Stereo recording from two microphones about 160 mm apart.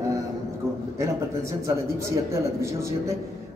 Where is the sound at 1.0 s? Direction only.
20° right (ahead or behind).